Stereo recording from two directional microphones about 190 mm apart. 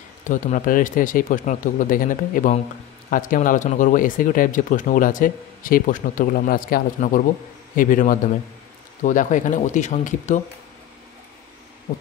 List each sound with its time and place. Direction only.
0.2 s speech: 40° left (ahead or behind)